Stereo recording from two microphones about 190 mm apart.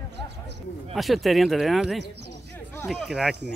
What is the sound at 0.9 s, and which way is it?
Speech, centre (ahead or behind).